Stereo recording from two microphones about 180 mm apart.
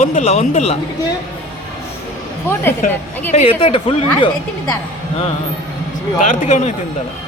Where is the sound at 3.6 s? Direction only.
30° left (ahead or behind).